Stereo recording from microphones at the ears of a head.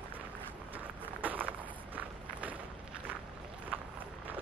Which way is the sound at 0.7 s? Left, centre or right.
Right.